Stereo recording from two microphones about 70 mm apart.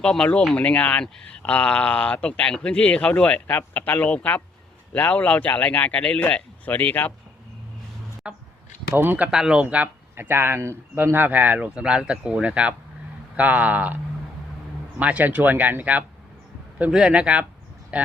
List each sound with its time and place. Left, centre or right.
0.0 s speech: centre
8.2 s a man's voice: centre
9.0 s speech: right
9.3 s a man's voice: centre
10.2 s a man's voice: right; by 18.1 s centre